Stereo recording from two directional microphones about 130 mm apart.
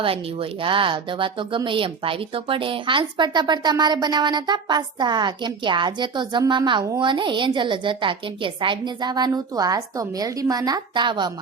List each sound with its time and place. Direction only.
0.0 s speech: 45° right (ahead or behind)